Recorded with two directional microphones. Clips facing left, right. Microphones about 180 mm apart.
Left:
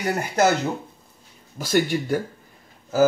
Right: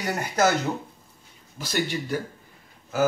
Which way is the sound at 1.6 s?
45° left (ahead or behind).